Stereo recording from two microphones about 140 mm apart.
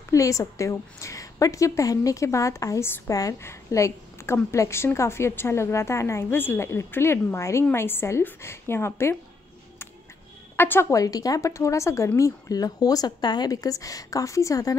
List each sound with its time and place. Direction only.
0.1 s a woman's voice: 25° left (ahead or behind)
10.5 s a woman's voice: 15° left (ahead or behind)